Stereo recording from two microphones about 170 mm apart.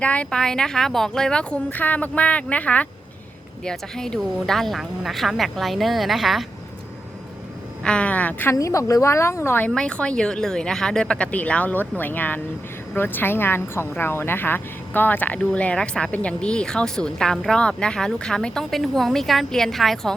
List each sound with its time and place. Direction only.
0.0 s a woman's voice: 5° left (ahead or behind)
7.9 s a woman's voice: 5° left (ahead or behind)